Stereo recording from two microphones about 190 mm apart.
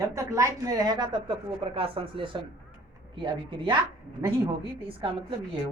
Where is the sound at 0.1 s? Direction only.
15° right (ahead or behind).